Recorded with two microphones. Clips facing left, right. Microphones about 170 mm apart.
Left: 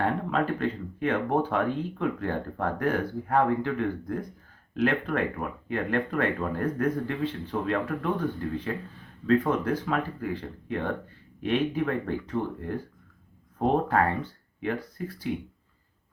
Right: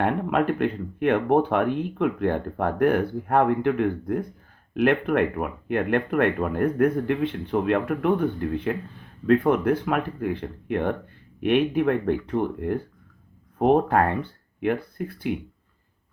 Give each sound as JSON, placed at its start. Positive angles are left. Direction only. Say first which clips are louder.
{"t": 0.0, "sound": "speech", "louder": "right 4 dB", "side_deg": -60}